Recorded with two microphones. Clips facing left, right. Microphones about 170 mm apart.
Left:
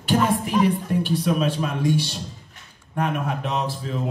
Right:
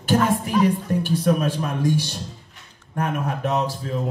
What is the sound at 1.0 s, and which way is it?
A man's voice, 45° right (ahead or behind).